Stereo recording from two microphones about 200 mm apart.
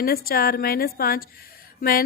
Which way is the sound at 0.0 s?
50° left (ahead or behind).